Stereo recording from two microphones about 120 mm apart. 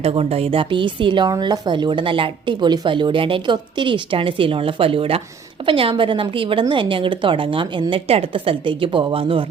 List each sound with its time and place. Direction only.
0.0 s a woman's voice: 55° right (ahead or behind)